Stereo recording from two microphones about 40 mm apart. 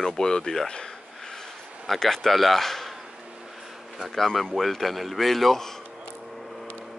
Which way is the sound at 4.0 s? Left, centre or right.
Centre.